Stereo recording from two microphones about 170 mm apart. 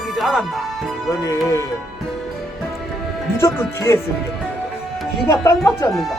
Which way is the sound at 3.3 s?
15° left (ahead or behind).